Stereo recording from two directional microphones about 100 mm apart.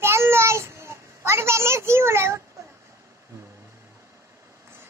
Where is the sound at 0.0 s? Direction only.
25° right (ahead or behind).